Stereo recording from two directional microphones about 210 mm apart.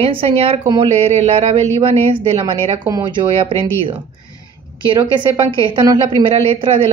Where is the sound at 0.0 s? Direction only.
30° right (ahead or behind).